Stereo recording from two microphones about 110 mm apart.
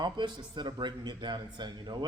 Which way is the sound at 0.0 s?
40° right (ahead or behind).